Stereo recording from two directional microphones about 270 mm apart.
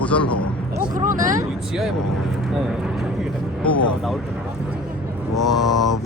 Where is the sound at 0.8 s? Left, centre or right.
Right.